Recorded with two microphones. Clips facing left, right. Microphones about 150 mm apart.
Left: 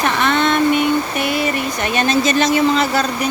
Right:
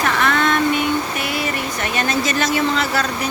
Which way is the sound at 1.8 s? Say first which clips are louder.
Left 5 dB; 20° left (ahead or behind).